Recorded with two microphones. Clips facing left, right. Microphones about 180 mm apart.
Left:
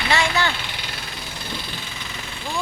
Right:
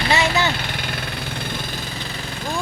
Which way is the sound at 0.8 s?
55° right (ahead or behind).